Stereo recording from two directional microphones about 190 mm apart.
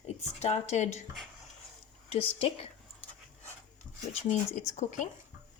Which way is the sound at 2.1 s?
30° left (ahead or behind).